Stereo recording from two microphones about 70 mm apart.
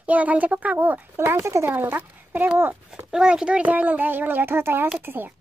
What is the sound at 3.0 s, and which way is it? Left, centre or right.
A woman's voice, centre.